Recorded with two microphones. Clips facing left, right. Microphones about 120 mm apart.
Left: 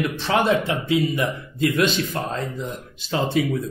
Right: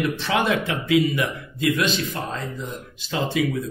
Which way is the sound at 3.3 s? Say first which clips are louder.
Even; 35° left (ahead or behind).